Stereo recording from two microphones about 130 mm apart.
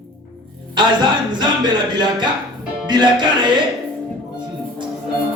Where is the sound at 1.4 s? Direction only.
35° right (ahead or behind).